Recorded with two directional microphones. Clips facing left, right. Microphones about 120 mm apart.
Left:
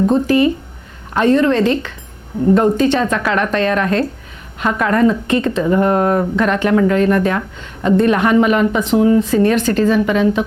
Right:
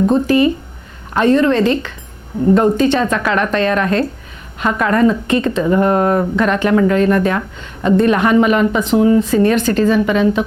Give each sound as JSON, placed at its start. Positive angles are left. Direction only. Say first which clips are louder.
{"t": 0.0, "sound": "speech", "louder": "right 1 dB", "side_deg": -25}